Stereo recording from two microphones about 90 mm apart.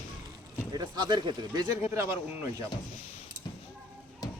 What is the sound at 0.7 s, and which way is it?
Speech, 50° right (ahead or behind).